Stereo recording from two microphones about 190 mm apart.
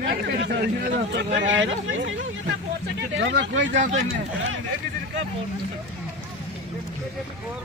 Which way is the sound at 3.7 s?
40° right (ahead or behind).